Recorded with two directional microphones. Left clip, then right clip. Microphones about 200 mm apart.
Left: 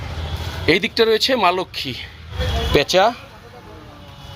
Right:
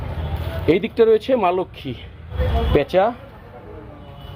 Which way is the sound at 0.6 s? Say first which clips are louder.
Even; 5° left (ahead or behind).